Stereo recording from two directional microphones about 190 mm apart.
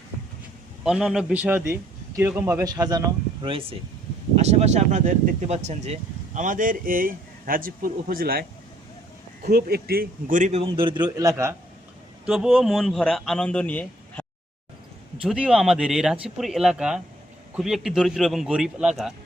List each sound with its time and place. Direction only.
0.9 s a man's voice: 5° right (ahead or behind); by 8.4 s 50° right (ahead or behind)
9.5 s speech: 55° right (ahead or behind); by 11.0 s 25° right (ahead or behind)
11.0 s a man's voice: 15° right (ahead or behind)
12.2 s a man's voice: 5° right (ahead or behind)
15.2 s a man's voice: 5° right (ahead or behind)